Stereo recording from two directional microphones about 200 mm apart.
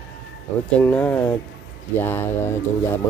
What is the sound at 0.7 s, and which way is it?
Speech, 5° left (ahead or behind).